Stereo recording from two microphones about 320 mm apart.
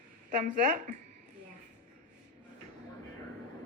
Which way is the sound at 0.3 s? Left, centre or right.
Right.